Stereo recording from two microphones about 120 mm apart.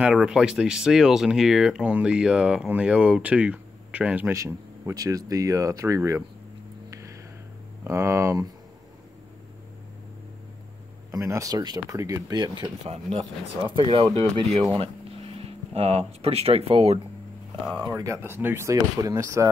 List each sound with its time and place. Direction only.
0.0 s speech: 5° right (ahead or behind)
4.3 s speech: 25° right (ahead or behind)
6.9 s a sound: 25° right (ahead or behind)
7.8 s speech: 25° right (ahead or behind)
11.1 s speech: 25° right (ahead or behind)
12.8 s speech: 65° right (ahead or behind)
13.7 s speech: 50° right (ahead or behind)
17.8 s speech: 30° right (ahead or behind)